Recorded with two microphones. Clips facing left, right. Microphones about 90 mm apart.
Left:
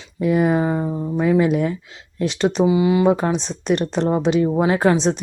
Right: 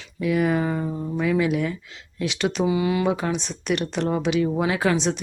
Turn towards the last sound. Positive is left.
turn(degrees=35)  # may be behind; listen again after turning